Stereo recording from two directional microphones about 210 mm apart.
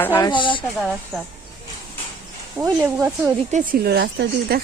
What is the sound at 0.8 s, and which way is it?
Speech, centre (ahead or behind).